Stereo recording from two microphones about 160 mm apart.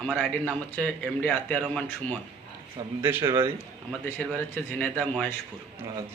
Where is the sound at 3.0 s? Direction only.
15° right (ahead or behind).